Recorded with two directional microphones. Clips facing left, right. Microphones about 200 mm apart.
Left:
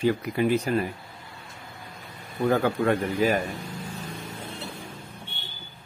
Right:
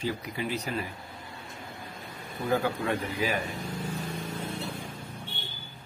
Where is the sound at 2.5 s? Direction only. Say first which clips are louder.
Left 4 dB; 50° left (ahead or behind).